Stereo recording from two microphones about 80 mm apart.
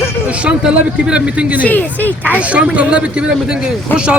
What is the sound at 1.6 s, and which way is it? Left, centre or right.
Speech, left.